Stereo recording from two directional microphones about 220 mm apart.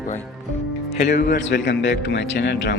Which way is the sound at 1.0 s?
50° left (ahead or behind).